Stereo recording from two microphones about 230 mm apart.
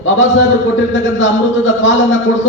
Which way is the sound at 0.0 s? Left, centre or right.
Left.